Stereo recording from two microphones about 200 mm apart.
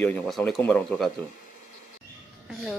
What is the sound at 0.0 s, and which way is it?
Speech, 5° left (ahead or behind).